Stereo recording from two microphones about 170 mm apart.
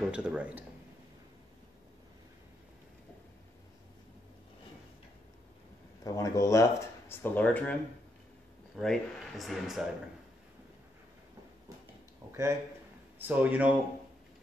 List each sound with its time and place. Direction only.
0.1 s speech: 5° right (ahead or behind)
6.0 s speech: 20° left (ahead or behind)
8.7 s speech: centre (ahead or behind)
12.3 s a sound: 15° right (ahead or behind)
13.3 s speech: 10° right (ahead or behind)